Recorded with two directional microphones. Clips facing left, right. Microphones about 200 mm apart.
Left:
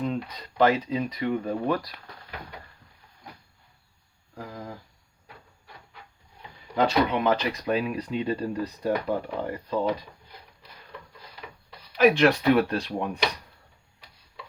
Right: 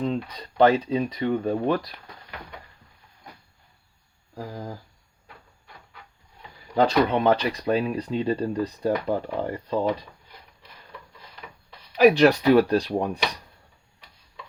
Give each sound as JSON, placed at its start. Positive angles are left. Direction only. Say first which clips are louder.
{"t": 0.0, "sound": "speech", "louder": "right 2 dB", "side_deg": -30}
{"t": 4.4, "sound": "speech", "louder": "right 3 dB", "side_deg": -30}
{"t": 6.7, "sound": "speech", "louder": "right 3 dB", "side_deg": -35}
{"t": 11.9, "sound": "speech", "louder": "right 3 dB", "side_deg": -35}